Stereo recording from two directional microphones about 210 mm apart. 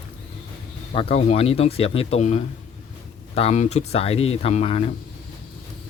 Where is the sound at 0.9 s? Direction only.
30° left (ahead or behind).